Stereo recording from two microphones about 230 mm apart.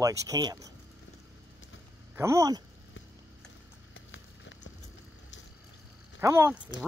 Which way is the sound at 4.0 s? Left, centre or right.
Left.